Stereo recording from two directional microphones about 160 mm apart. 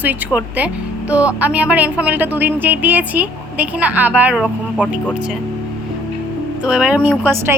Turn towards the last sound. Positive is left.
turn(degrees=-15)  # may be behind; listen again after turning